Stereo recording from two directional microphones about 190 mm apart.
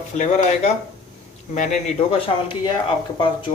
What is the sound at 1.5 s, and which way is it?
Speech, 40° left (ahead or behind).